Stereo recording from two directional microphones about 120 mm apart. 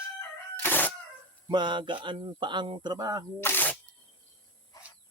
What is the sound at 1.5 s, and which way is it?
Speech, 40° right (ahead or behind).